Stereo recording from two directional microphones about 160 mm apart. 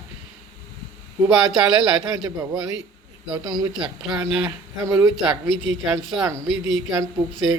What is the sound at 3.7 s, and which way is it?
Speech, 5° right (ahead or behind).